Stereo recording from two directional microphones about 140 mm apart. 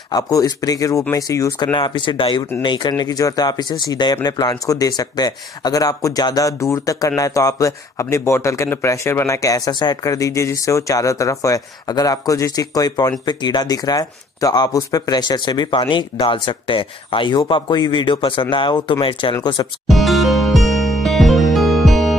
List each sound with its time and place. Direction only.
0.1 s speech: 25° left (ahead or behind)
1.7 s speech: 35° left (ahead or behind)
19.9 s music: centre (ahead or behind)